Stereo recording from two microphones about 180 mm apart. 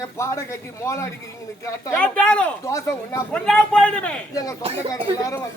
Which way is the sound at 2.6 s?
15° left (ahead or behind).